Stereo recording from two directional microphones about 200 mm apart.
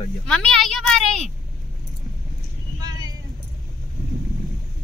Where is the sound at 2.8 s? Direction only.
20° right (ahead or behind).